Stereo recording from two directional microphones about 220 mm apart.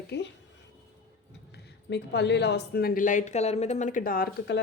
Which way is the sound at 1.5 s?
50° left (ahead or behind).